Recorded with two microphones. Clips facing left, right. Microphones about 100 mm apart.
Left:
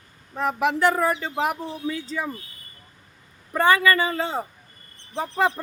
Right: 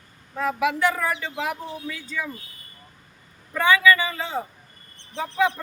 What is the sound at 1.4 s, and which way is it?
Speech, 50° left (ahead or behind).